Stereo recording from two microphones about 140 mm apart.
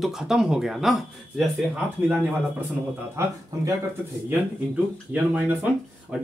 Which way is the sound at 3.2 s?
20° right (ahead or behind).